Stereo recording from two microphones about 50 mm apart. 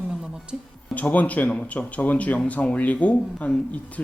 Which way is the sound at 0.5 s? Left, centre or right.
Centre.